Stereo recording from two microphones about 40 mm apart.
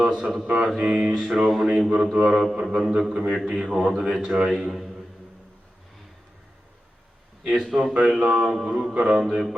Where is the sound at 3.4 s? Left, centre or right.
Centre.